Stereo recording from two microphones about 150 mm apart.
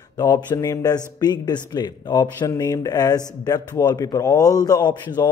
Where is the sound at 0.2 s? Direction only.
25° left (ahead or behind).